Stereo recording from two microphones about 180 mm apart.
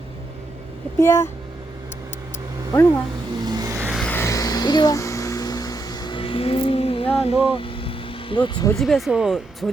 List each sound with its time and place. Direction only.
0.9 s speech: 15° left (ahead or behind)
3.4 s vehicle: 20° right (ahead or behind)
3.8 s vehicle: centre (ahead or behind)
4.1 s a sound: 15° left (ahead or behind)
8.7 s speech: centre (ahead or behind)